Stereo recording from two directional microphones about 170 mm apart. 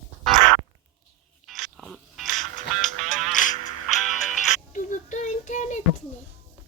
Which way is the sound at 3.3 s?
50° left (ahead or behind).